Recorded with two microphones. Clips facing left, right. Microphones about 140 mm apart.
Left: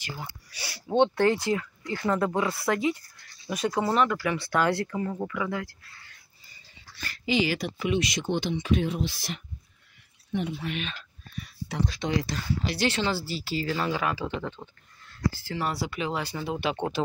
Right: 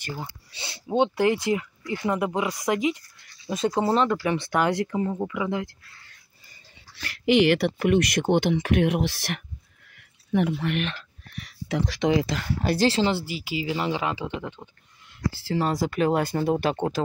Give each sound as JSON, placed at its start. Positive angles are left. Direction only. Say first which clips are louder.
{"t": 0.2, "sound": "speech", "louder": "right 2 dB", "side_deg": -25}
{"t": 0.8, "sound": "speech", "louder": "even", "side_deg": -10}
{"t": 7.0, "sound": "speech", "louder": "right 7 dB", "side_deg": -65}
{"t": 12.6, "sound": "speech", "louder": "right 7 dB", "side_deg": -40}
{"t": 12.9, "sound": "speech", "louder": "right 4 dB", "side_deg": -25}
{"t": 15.4, "sound": "speech", "louder": "right 5 dB", "side_deg": -30}
{"t": 15.7, "sound": "speech", "louder": "right 8 dB", "side_deg": -45}